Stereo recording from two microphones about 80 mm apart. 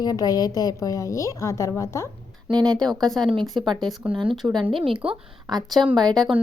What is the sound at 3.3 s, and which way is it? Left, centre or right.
Speech, right.